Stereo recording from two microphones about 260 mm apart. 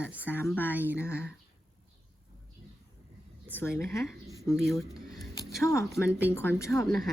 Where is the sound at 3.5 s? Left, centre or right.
Centre.